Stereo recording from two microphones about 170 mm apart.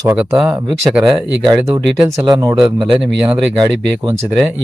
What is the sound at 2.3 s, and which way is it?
Speech, 20° right (ahead or behind).